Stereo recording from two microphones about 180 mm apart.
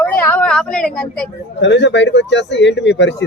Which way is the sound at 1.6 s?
80° left.